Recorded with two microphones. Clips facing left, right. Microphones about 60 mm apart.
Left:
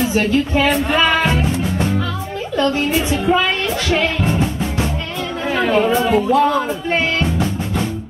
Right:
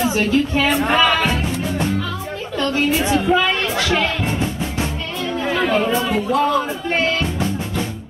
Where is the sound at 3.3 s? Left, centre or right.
Centre.